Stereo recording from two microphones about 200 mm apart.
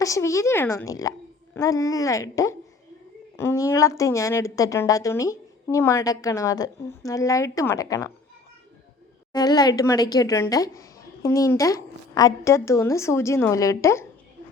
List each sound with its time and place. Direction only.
0.0 s a woman's voice: 15° left (ahead or behind)
9.3 s a woman's voice: 20° left (ahead or behind)